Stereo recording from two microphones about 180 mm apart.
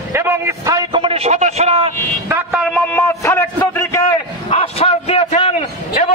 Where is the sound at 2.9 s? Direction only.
15° left (ahead or behind).